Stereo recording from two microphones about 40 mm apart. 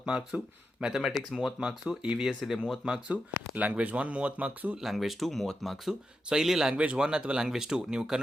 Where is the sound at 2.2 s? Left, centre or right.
Centre.